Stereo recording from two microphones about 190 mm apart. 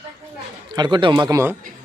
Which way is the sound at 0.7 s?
25° right (ahead or behind).